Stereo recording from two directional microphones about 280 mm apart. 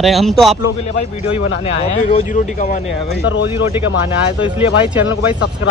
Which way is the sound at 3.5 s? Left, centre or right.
Centre.